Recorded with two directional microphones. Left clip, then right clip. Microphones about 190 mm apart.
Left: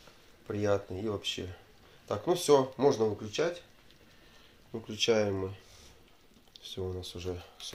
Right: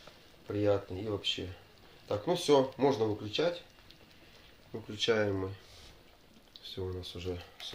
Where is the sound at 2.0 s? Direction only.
25° left (ahead or behind).